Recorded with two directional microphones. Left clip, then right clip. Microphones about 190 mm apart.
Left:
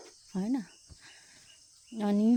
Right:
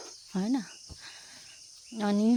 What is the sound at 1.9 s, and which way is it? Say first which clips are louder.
Speech: right 1 dB; 15° left (ahead or behind).